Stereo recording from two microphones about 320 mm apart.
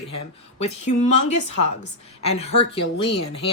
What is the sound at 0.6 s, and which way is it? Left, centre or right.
Speech, left.